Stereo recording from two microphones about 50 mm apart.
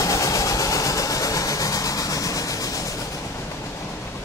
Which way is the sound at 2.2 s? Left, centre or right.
Left.